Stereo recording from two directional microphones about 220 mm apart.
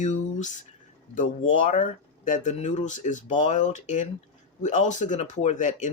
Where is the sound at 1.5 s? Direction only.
35° left (ahead or behind).